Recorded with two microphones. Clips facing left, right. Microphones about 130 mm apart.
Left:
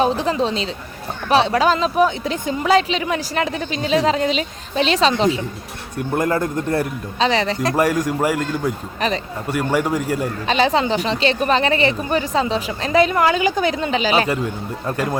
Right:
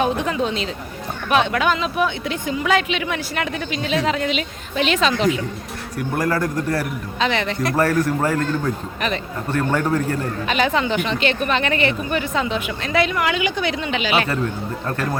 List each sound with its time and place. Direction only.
0.0 s a man's voice: 30° left (ahead or behind)
7.3 s speech: 35° left (ahead or behind)
7.7 s a man's voice: 15° left (ahead or behind)
9.0 s speech: 35° left (ahead or behind)
9.5 s a man's voice: 10° left (ahead or behind)
10.4 s speech: 30° left (ahead or behind)
14.8 s a man's voice: 15° left (ahead or behind)